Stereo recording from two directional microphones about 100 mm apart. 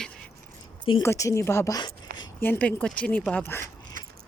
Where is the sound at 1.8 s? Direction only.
50° left (ahead or behind).